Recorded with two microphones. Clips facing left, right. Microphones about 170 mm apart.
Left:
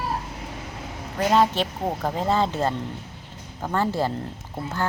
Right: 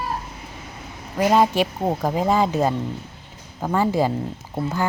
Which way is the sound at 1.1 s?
10° right (ahead or behind).